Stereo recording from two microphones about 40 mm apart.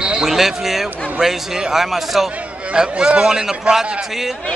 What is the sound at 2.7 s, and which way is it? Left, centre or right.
Speech, right.